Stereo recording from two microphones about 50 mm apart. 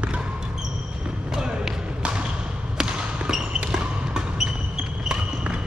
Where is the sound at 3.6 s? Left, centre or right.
Centre.